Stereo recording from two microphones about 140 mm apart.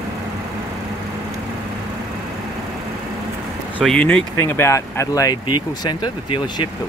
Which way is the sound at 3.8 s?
5° left (ahead or behind).